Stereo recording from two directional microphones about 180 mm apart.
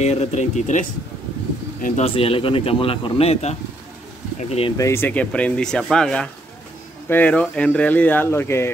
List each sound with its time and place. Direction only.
0.0 s speech: 40° left (ahead or behind)
2.0 s speech: 30° left (ahead or behind)
4.7 s speech: 15° left (ahead or behind)